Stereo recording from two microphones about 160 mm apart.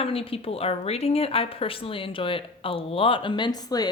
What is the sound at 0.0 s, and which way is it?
Speech, 35° left (ahead or behind).